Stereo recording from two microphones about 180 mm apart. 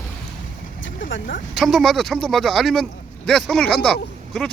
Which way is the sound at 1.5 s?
Centre (ahead or behind).